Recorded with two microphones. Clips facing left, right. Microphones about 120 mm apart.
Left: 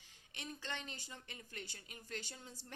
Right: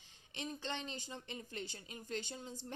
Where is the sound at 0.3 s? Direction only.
20° right (ahead or behind).